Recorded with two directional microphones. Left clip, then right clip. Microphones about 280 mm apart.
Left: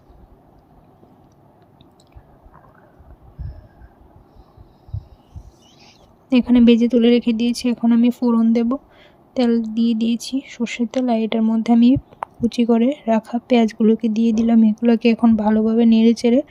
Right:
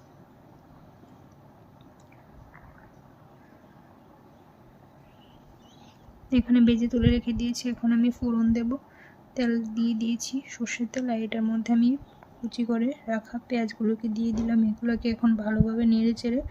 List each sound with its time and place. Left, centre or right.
5.8 s a woman's voice: centre